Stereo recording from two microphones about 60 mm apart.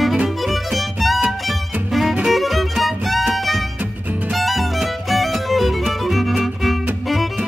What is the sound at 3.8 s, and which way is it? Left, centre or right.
Music, right.